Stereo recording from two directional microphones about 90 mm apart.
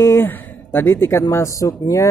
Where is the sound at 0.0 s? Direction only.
25° left (ahead or behind).